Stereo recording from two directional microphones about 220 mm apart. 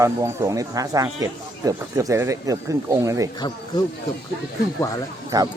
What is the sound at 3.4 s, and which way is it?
Speech, 20° left (ahead or behind).